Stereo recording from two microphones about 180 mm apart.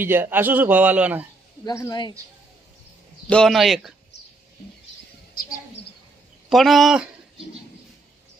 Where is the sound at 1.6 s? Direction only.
20° left (ahead or behind).